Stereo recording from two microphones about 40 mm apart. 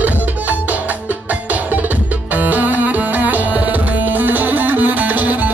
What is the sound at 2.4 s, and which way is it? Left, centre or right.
Music, right.